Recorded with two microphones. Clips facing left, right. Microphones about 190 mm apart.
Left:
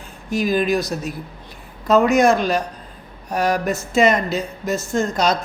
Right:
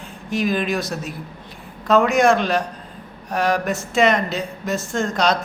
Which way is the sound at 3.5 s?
Centre (ahead or behind).